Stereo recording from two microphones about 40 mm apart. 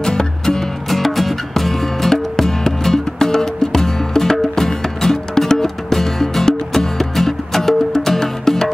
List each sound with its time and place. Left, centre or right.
0.0 s music: centre
0.8 s music: centre